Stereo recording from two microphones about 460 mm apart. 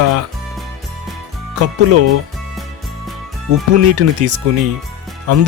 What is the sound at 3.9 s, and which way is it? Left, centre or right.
Speech, right.